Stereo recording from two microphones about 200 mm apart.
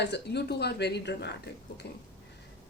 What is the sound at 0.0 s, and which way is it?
Speech, 55° left (ahead or behind).